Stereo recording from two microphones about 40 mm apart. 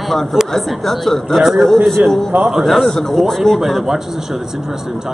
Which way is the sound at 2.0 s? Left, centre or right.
Right.